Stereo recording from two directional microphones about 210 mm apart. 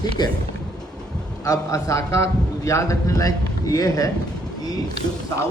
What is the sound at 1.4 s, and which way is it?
A man's voice, 15° left (ahead or behind).